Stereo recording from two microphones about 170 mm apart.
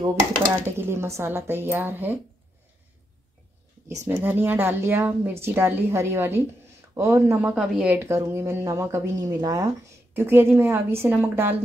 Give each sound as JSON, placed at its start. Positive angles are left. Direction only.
{"t": 0.7, "sound": "a woman's voice", "side_deg": -15}
{"t": 4.0, "sound": "a woman's voice", "side_deg": -10}
{"t": 7.4, "sound": "a woman's voice", "side_deg": -5}